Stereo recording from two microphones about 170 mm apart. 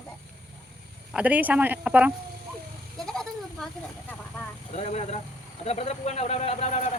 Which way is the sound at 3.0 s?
5° left (ahead or behind).